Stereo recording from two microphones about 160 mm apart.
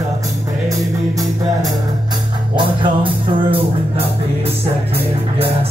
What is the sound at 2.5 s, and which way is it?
Music, 30° right (ahead or behind).